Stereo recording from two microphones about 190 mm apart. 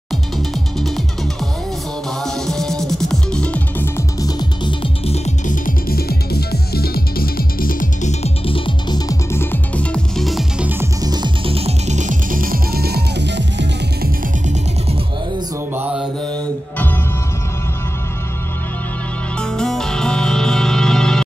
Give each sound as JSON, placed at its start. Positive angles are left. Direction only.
{"t": 0.7, "sound": "music", "side_deg": 0}
{"t": 14.4, "sound": "music", "side_deg": -40}
{"t": 15.7, "sound": "mantra", "side_deg": -10}
{"t": 16.7, "sound": "music", "side_deg": 10}
{"t": 19.3, "sound": "music", "side_deg": 5}